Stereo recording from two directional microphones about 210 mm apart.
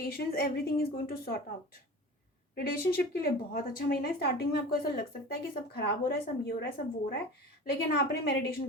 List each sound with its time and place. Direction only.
0.0 s speech: 45° left (ahead or behind)
2.6 s speech: 45° left (ahead or behind)